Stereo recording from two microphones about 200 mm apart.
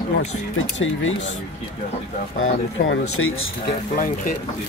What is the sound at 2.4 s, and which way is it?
Speech, 90° left.